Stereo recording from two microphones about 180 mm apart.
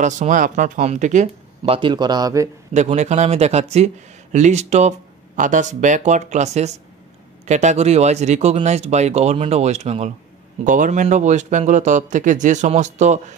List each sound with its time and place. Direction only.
0.0 s speech: 45° right (ahead or behind)
1.8 s speech: 25° right (ahead or behind)
2.7 s speech: 40° right (ahead or behind)